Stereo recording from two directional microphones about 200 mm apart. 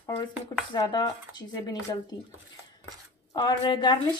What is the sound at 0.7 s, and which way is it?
Speech, 20° left (ahead or behind).